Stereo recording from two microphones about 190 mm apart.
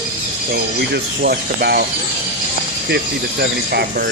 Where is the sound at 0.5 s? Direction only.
55° right (ahead or behind).